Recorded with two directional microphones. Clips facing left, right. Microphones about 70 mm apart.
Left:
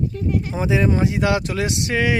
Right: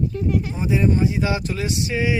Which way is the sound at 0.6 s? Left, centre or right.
Left.